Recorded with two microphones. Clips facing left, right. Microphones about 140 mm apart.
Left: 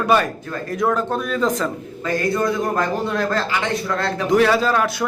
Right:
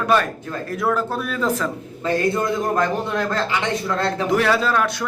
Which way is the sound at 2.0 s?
25° right (ahead or behind).